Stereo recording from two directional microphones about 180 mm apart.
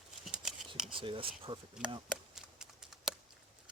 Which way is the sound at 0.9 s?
30° right (ahead or behind).